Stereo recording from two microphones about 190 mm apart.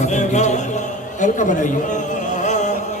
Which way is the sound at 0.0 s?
40° left (ahead or behind).